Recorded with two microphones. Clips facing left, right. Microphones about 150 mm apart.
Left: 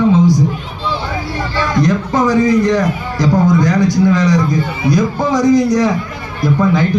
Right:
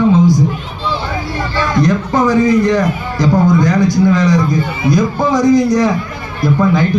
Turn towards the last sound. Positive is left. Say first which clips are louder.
# right 1 dB
turn(degrees=-50)  # may be behind; listen again after turning